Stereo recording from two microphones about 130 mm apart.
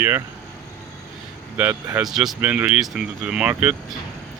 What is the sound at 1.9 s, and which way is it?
Speech, 5° right (ahead or behind).